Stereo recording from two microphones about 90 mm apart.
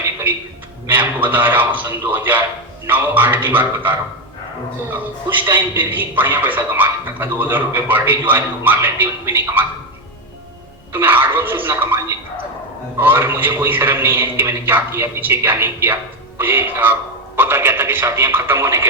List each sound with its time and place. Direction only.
0.9 s speech: 20° right (ahead or behind)
10.9 s speech: 25° right (ahead or behind)